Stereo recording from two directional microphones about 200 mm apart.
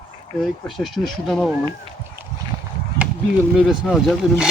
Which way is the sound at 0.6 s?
Centre (ahead or behind).